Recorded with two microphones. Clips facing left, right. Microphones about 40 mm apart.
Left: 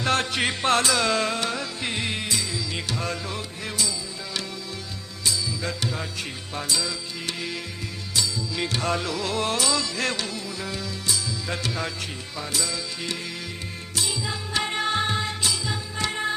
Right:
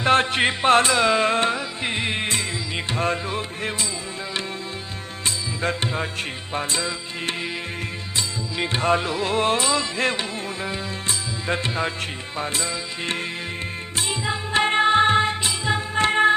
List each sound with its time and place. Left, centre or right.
0.0 s music: right
1.3 s music: right
5.2 s music: right
8.1 s music: right